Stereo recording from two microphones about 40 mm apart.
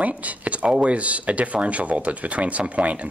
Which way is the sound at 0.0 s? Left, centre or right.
Right.